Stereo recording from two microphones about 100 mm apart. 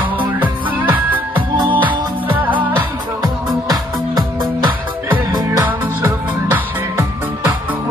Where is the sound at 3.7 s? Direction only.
40° right (ahead or behind).